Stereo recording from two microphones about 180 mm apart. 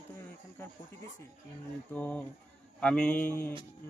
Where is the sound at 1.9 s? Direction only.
10° left (ahead or behind).